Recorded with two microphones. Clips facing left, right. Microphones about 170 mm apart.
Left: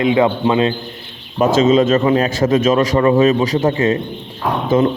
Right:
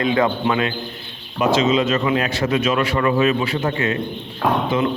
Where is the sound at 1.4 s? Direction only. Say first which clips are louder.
Left 5 dB; 50° left (ahead or behind); by 3.9 s 30° left (ahead or behind).